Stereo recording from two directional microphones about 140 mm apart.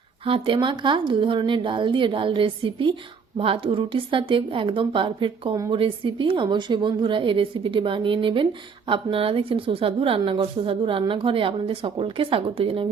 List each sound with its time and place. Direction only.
0.3 s a woman's voice: 40° right (ahead or behind)